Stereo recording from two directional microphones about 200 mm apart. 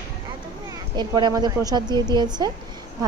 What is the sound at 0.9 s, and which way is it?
A woman's voice, 20° right (ahead or behind).